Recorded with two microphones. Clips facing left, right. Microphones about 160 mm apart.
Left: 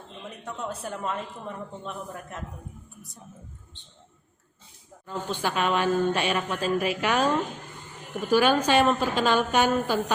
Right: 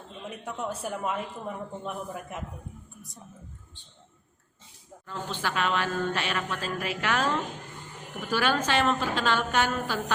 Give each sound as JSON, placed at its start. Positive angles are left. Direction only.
{"t": 0.4, "sound": "a woman's voice", "side_deg": -5}
{"t": 5.0, "sound": "speech", "side_deg": 15}